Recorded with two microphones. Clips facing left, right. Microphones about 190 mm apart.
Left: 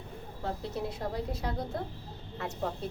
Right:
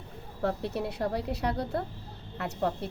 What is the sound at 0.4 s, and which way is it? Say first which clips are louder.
A woman's voice: right 5 dB; 65° right (ahead or behind).